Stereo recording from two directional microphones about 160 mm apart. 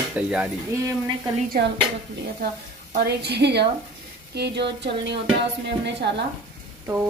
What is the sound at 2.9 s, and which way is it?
Speech, 80° right.